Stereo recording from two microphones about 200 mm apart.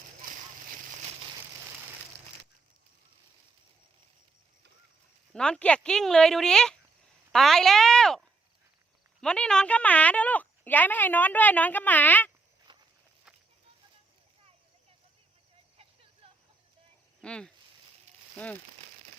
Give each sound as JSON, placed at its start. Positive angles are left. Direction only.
{"t": 5.3, "sound": "speech", "side_deg": 5}
{"t": 9.2, "sound": "speech", "side_deg": 5}
{"t": 12.7, "sound": "walk", "side_deg": -25}
{"t": 16.2, "sound": "a sound", "side_deg": -25}
{"t": 17.2, "sound": "speech", "side_deg": 5}